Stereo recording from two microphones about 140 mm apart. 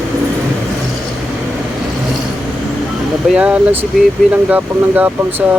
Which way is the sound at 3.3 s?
10° right (ahead or behind).